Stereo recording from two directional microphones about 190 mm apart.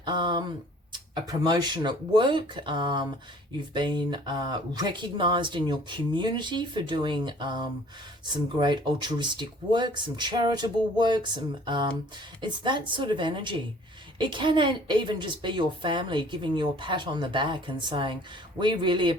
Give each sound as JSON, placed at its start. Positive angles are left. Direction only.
{"t": 0.0, "sound": "a woman's voice", "side_deg": -25}